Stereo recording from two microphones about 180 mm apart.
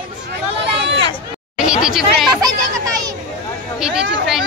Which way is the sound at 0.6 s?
80° right.